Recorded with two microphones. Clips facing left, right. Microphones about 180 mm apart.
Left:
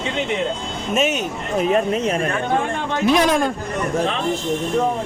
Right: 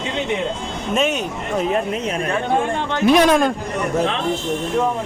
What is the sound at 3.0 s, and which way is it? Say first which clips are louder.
Speech: right 3 dB; 60° right (ahead or behind).